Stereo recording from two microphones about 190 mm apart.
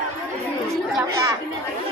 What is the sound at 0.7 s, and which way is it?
Chatter, centre (ahead or behind).